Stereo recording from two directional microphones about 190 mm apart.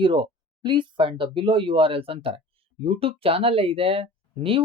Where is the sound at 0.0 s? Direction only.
25° right (ahead or behind).